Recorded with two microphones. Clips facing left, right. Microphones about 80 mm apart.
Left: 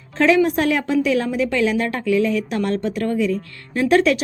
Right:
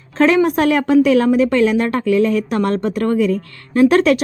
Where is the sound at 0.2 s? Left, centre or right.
Right.